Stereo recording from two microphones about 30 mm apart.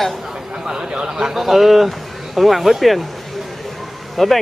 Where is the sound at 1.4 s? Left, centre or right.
Centre.